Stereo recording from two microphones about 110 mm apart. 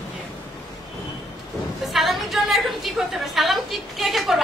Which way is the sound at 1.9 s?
Centre (ahead or behind).